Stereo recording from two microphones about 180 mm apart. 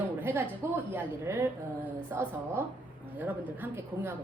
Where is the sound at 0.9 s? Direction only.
10° right (ahead or behind).